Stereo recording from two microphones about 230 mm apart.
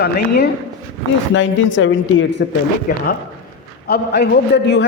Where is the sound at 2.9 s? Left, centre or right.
Left.